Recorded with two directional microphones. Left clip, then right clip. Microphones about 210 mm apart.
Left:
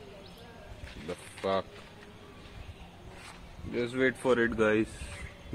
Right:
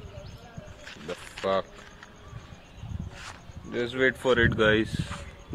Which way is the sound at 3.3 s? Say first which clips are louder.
Right 1 dB; 45° right (ahead or behind).